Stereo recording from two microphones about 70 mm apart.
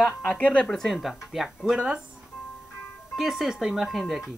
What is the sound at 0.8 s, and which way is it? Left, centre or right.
Speech, centre.